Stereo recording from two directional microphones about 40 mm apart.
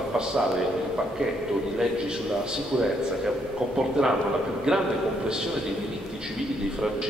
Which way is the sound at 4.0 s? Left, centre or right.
Centre.